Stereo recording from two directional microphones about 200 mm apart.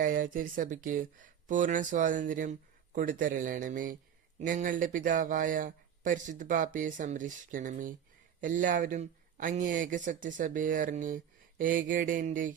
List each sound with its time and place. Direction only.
0.0 s speech: 45° right (ahead or behind)